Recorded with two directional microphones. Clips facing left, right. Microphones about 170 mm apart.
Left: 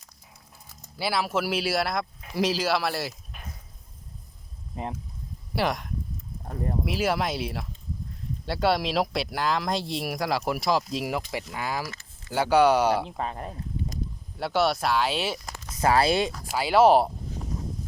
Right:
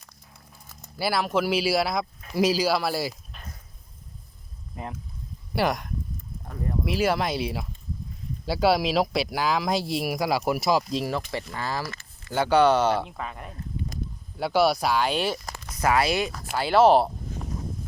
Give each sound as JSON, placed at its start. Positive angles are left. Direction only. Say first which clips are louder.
{"t": 0.9, "sound": "speech", "louder": "right 2 dB", "side_deg": 0}
{"t": 3.3, "sound": "a sound", "louder": "left 1 dB", "side_deg": 10}
{"t": 5.5, "sound": "speech", "louder": "right 2 dB", "side_deg": 0}
{"t": 11.5, "sound": "speech", "louder": "even", "side_deg": 10}
{"t": 11.9, "sound": "a sound", "louder": "right 2 dB", "side_deg": -60}
{"t": 12.3, "sound": "speech", "louder": "even", "side_deg": 5}
{"t": 13.1, "sound": "speech", "louder": "left 4 dB", "side_deg": 35}
{"t": 14.3, "sound": "speech", "louder": "right 3 dB", "side_deg": 0}
{"t": 15.8, "sound": "speech", "louder": "left 1 dB", "side_deg": 30}
{"t": 16.6, "sound": "speech", "louder": "even", "side_deg": 10}